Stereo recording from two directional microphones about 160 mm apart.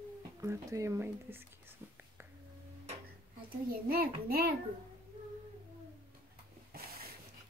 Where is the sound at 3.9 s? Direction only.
70° right (ahead or behind).